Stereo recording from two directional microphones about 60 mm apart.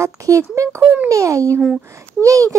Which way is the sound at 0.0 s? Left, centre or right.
Right.